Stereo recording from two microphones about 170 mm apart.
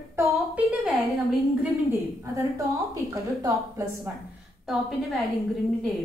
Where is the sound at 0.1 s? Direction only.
15° right (ahead or behind).